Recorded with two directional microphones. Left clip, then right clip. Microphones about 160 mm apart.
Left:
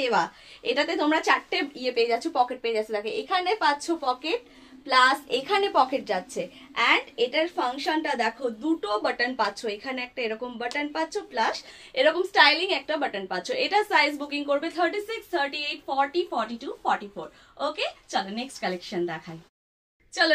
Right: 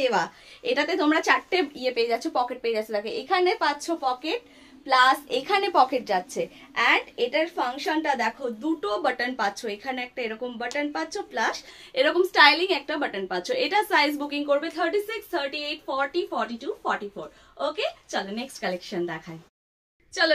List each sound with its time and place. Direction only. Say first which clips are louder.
0.0 s a woman's voice: even; 20° right (ahead or behind)